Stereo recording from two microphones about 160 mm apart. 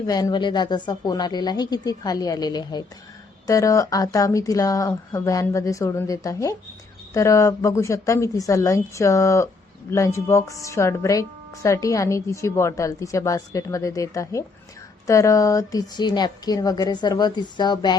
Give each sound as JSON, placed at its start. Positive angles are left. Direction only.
{"t": 0.1, "sound": "speech", "side_deg": 25}